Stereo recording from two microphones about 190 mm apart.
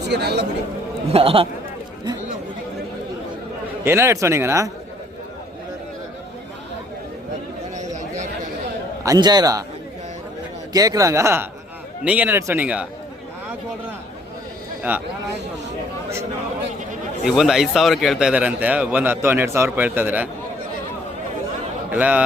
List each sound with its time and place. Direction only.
0.1 s speech: 60° right (ahead or behind)
1.1 s a man's voice: 30° right (ahead or behind)
3.8 s a man's voice: 15° right (ahead or behind)
9.0 s a man's voice: 20° right (ahead or behind)
10.7 s a man's voice: 20° right (ahead or behind)
14.8 s speech: 10° right (ahead or behind)
17.2 s a man's voice: centre (ahead or behind)
21.9 s a man's voice: 5° right (ahead or behind)